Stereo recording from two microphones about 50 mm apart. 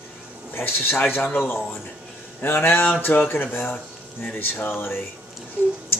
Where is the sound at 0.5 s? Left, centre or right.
Left.